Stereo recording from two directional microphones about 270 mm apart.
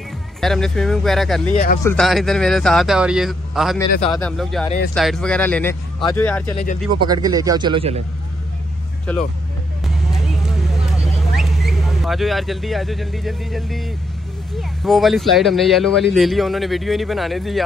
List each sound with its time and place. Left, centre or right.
0.4 s speech: centre
1.5 s speech: left
1.8 s speech: centre
7.0 s speech: centre
9.1 s speech: centre
11.3 s speech: centre